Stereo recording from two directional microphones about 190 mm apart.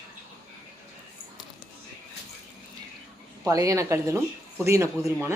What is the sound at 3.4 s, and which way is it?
A woman's voice, 20° right (ahead or behind).